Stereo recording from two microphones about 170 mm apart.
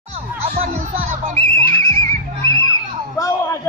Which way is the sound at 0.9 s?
45° right (ahead or behind).